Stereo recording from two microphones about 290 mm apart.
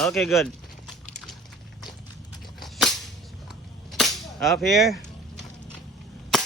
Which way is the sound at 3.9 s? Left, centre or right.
Centre.